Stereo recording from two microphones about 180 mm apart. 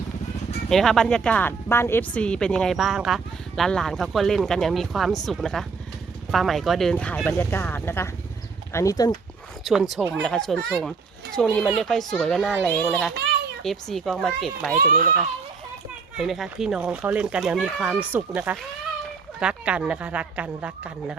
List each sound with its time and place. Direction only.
0.7 s speech: centre (ahead or behind); by 9.1 s 20° left (ahead or behind)
9.6 s speech: centre (ahead or behind)
16.1 s speech: centre (ahead or behind)